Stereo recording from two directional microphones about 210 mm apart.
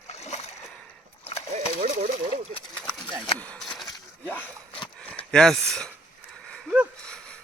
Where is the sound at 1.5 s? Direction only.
35° right (ahead or behind).